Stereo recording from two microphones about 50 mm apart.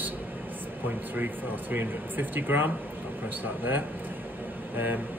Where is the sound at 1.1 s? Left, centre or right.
Right.